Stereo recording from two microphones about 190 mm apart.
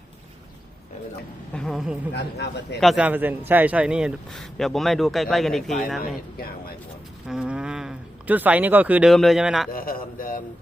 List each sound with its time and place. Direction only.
1.5 s a man's voice: centre (ahead or behind)
2.1 s a man's voice: 60° left (ahead or behind)
2.8 s a man's voice: 5° right (ahead or behind)
6.3 s a man's voice: 50° left (ahead or behind)
7.3 s speech: 5° right (ahead or behind)
9.7 s a man's voice: 50° left (ahead or behind)